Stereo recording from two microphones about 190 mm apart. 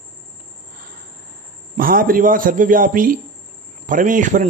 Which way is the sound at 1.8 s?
50° right (ahead or behind).